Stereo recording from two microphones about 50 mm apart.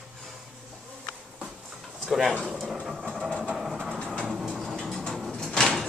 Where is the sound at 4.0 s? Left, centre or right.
Centre.